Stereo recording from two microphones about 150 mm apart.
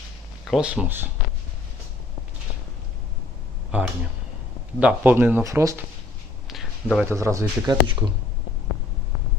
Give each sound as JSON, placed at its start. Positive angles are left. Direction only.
{"t": 0.4, "sound": "speech", "side_deg": -5}
{"t": 4.8, "sound": "speech", "side_deg": -10}
{"t": 6.5, "sound": "a sound", "side_deg": 0}
{"t": 7.0, "sound": "speech", "side_deg": -20}